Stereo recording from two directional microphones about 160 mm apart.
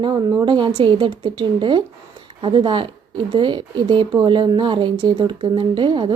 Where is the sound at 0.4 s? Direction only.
30° right (ahead or behind).